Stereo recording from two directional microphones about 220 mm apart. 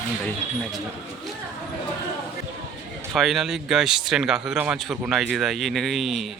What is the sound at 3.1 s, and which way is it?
A man's voice, centre (ahead or behind).